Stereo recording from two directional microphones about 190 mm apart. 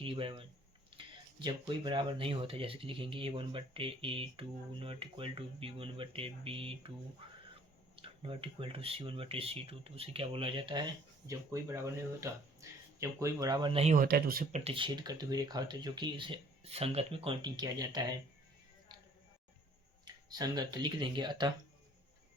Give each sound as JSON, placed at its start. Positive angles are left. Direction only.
{"t": 0.0, "sound": "speech", "side_deg": -30}
{"t": 7.2, "sound": "a sound", "side_deg": -30}
{"t": 7.9, "sound": "speech", "side_deg": -30}
{"t": 11.3, "sound": "speech", "side_deg": -15}
{"t": 13.9, "sound": "speech", "side_deg": -50}
{"t": 14.6, "sound": "speech", "side_deg": -30}
{"t": 20.1, "sound": "speech", "side_deg": -20}